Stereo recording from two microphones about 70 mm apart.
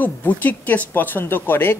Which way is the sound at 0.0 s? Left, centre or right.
Left.